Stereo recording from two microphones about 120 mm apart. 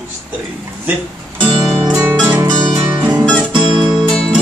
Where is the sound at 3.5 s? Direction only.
40° right (ahead or behind).